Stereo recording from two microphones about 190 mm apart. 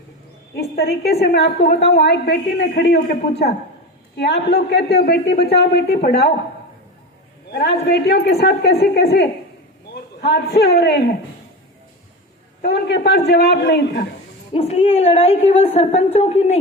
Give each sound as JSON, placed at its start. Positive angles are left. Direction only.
{"t": 0.5, "sound": "a man's voice", "side_deg": 55}
{"t": 7.5, "sound": "a man's voice", "side_deg": 60}
{"t": 12.6, "sound": "a man's voice", "side_deg": 60}
{"t": 14.5, "sound": "a woman's voice", "side_deg": 30}